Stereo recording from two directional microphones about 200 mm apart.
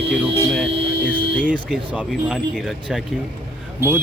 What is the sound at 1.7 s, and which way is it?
Speech, 5° right (ahead or behind).